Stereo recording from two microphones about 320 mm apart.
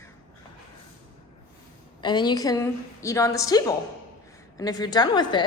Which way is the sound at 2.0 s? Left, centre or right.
Centre.